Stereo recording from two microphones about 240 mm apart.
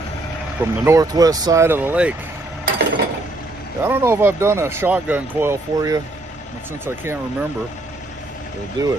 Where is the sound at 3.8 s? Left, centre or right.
Centre.